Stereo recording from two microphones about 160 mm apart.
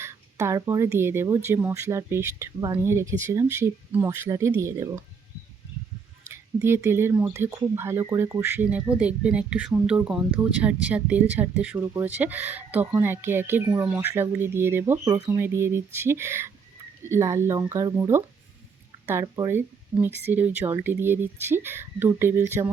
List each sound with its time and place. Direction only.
0.0 s speech: 15° right (ahead or behind)
6.2 s speech: 15° right (ahead or behind)
19.2 s speech: 20° right (ahead or behind)